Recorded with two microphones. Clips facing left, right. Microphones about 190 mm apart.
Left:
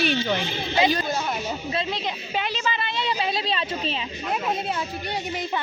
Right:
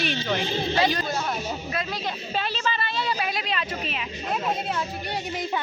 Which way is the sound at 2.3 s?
15° left (ahead or behind).